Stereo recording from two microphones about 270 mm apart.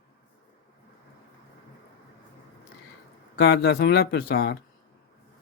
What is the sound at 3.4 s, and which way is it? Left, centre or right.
Speech, left.